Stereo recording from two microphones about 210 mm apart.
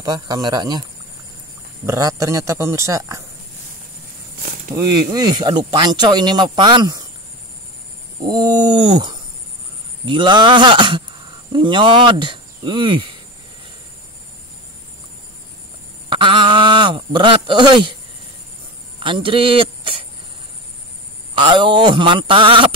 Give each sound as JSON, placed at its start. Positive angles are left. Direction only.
{"t": 0.0, "sound": "speech", "side_deg": -20}
{"t": 1.9, "sound": "a man's voice", "side_deg": -15}
{"t": 4.7, "sound": "speech", "side_deg": -20}
{"t": 8.3, "sound": "speech", "side_deg": -20}
{"t": 16.1, "sound": "a sound", "side_deg": -20}
{"t": 18.9, "sound": "a sound", "side_deg": -25}
{"t": 21.4, "sound": "speech", "side_deg": -20}